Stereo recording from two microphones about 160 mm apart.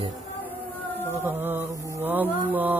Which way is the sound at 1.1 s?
15° right (ahead or behind).